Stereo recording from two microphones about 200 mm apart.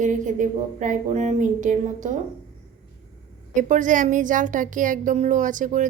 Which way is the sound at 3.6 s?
40° right (ahead or behind).